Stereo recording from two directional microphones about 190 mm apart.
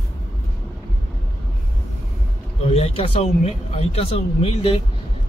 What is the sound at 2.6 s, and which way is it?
Speech, 30° left (ahead or behind).